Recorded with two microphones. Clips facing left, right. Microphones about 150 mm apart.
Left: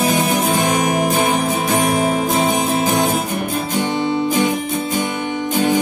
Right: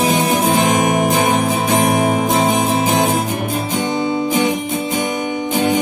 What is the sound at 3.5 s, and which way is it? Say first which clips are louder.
Guitar: even; 15° right (ahead or behind).